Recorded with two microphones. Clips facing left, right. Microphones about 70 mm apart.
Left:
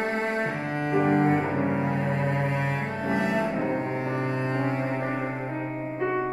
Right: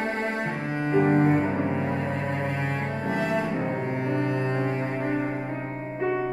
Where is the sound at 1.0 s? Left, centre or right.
Centre.